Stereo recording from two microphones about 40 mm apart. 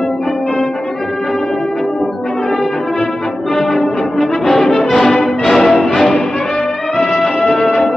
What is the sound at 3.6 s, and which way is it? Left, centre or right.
Music, centre.